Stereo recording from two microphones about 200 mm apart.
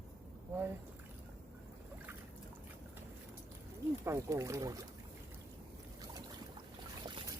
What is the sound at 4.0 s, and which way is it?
Speech, 15° right (ahead or behind).